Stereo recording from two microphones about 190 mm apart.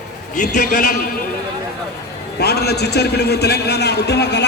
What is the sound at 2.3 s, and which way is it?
A man's voice, 60° left (ahead or behind).